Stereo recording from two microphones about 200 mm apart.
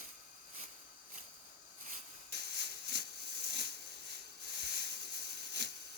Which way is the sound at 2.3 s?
55° right (ahead or behind).